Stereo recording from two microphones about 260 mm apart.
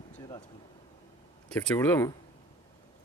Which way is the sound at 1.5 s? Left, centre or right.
Centre.